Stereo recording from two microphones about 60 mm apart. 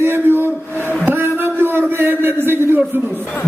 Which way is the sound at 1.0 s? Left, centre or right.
Right.